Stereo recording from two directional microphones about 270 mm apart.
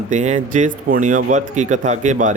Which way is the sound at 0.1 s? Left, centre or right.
Right.